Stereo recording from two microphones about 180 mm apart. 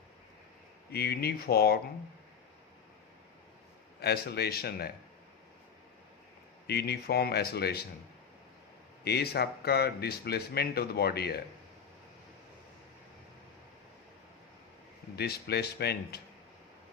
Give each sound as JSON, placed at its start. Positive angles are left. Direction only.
{"t": 0.9, "sound": "speech", "side_deg": 60}
{"t": 4.0, "sound": "speech", "side_deg": 65}
{"t": 6.7, "sound": "speech", "side_deg": 65}
{"t": 9.0, "sound": "speech", "side_deg": 65}
{"t": 15.1, "sound": "speech", "side_deg": 65}